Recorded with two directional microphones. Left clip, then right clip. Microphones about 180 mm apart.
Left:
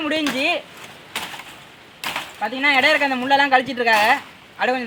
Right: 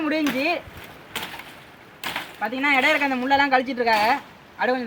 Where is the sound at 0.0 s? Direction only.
30° left (ahead or behind).